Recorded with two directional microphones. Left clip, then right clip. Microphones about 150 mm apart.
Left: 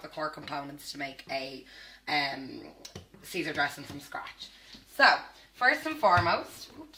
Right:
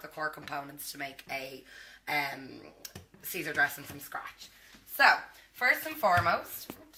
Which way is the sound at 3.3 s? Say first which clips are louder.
Right 1 dB; 5° left (ahead or behind).